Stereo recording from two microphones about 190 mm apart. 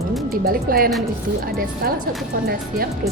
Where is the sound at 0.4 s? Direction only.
50° right (ahead or behind).